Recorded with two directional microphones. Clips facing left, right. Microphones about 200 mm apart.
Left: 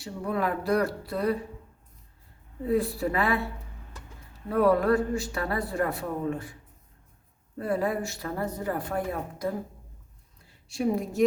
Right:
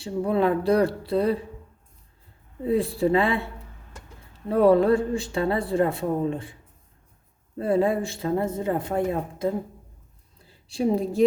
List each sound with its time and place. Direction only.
0.0 s speech: 30° right (ahead or behind)
2.6 s speech: 30° right (ahead or behind)
4.4 s speech: 25° right (ahead or behind)
7.6 s a woman's voice: 25° right (ahead or behind)